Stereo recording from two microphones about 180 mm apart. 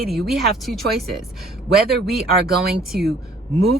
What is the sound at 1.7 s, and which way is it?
Speech, 60° right (ahead or behind).